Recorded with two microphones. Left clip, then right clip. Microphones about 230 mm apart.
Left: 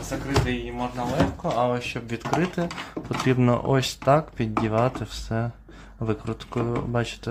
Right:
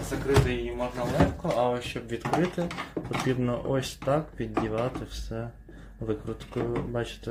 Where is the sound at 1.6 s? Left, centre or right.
Left.